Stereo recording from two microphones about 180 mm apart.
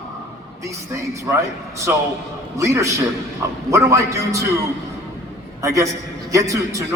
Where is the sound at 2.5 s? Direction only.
15° right (ahead or behind).